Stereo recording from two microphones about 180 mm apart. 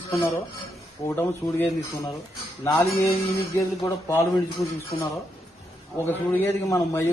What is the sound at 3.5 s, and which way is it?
A man's voice, 15° left (ahead or behind).